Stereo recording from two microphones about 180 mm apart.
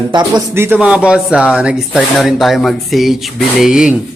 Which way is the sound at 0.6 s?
10° right (ahead or behind).